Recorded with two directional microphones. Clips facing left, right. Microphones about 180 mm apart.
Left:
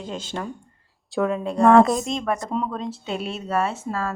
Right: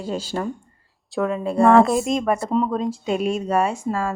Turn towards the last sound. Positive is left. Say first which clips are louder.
# right 3 dB
turn(degrees=-15)  # may be behind; listen again after turning